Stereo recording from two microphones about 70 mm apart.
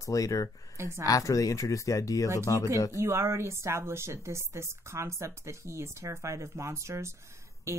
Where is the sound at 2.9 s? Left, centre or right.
Right.